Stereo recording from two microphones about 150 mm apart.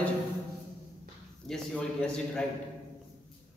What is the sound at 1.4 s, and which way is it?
A man's voice, 5° left (ahead or behind).